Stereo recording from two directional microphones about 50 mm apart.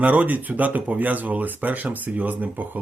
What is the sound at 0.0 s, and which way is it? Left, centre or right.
Speech, right.